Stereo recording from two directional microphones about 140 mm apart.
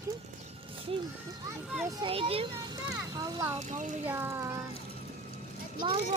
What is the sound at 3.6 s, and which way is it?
Speech, 60° right (ahead or behind).